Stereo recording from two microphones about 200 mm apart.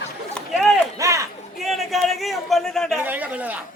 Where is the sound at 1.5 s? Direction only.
Centre (ahead or behind).